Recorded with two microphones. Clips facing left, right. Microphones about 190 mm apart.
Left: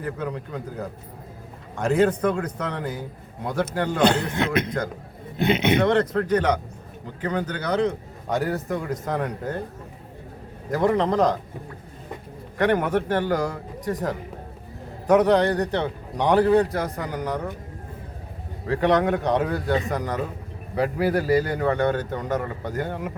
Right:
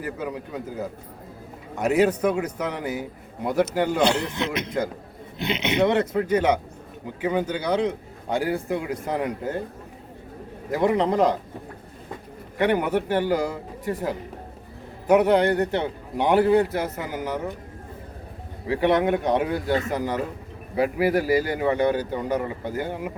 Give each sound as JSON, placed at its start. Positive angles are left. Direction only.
{"t": 0.0, "sound": "a man's voice", "side_deg": -5}
{"t": 4.0, "sound": "a man's voice", "side_deg": 55}
{"t": 5.8, "sound": "a man's voice", "side_deg": -10}
{"t": 10.7, "sound": "a man's voice", "side_deg": -15}
{"t": 12.5, "sound": "a man's voice", "side_deg": -5}
{"t": 15.1, "sound": "a man's voice", "side_deg": -10}
{"t": 16.7, "sound": "speech", "side_deg": -5}
{"t": 18.7, "sound": "a man's voice", "side_deg": -15}
{"t": 19.9, "sound": "speech", "side_deg": -5}